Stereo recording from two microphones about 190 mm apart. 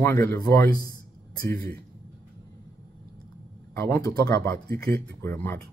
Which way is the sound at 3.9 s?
15° left (ahead or behind).